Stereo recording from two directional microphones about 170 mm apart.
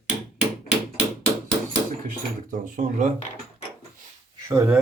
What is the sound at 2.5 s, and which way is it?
Speech, 50° right (ahead or behind).